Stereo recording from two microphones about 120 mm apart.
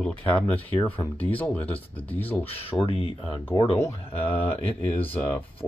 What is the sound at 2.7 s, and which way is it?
Speech, 50° left (ahead or behind).